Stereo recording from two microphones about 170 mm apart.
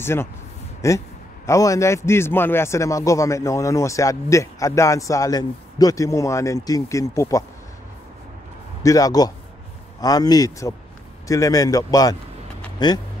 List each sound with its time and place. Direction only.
0.0 s a man's voice: 15° left (ahead or behind)
8.8 s speech: 20° left (ahead or behind)